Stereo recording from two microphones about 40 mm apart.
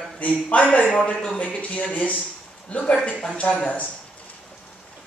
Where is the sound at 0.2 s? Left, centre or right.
Left.